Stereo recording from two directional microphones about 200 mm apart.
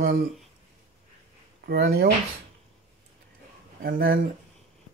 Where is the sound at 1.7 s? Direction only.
55° right (ahead or behind).